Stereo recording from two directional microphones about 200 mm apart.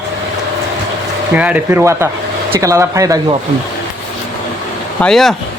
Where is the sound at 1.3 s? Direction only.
5° right (ahead or behind).